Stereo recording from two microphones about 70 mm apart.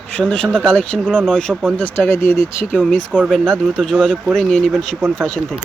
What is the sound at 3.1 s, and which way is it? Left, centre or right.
Speech, centre.